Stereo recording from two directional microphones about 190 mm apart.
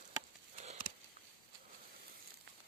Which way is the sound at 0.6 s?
35° right (ahead or behind).